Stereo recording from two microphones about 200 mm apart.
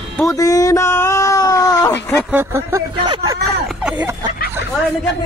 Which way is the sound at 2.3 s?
10° right (ahead or behind).